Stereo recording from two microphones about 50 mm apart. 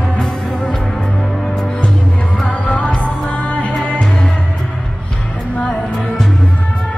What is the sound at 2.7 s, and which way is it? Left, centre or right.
Music, left.